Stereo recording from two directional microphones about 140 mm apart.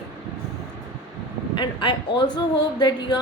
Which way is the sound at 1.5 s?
35° left (ahead or behind).